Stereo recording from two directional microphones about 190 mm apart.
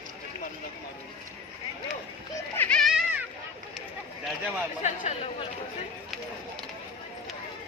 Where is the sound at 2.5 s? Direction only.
10° left (ahead or behind).